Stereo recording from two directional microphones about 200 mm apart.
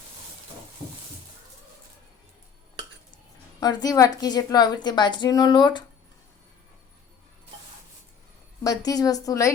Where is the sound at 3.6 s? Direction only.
20° left (ahead or behind).